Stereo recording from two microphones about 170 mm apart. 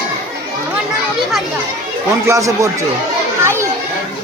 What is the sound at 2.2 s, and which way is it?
Speech, 20° right (ahead or behind).